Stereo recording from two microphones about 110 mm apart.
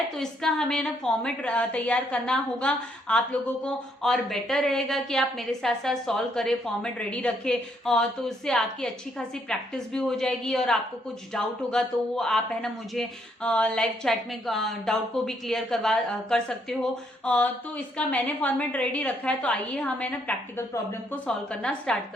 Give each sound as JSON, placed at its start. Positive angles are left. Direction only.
{"t": 0.2, "sound": "a woman's voice", "side_deg": 5}
{"t": 20.6, "sound": "speech", "side_deg": 25}
{"t": 21.2, "sound": "a woman's voice", "side_deg": 10}